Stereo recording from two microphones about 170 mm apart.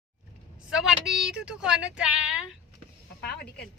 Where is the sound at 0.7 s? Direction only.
Centre (ahead or behind).